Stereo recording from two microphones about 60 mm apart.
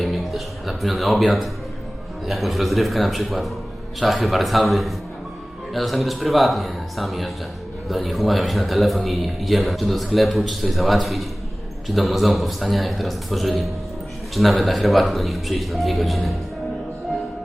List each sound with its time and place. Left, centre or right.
0.0 s a man's voice: centre